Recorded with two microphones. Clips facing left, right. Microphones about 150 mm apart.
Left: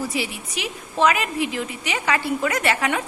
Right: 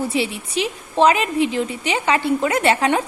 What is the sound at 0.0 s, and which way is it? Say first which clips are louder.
A woman's voice: right 5 dB; 25° right (ahead or behind).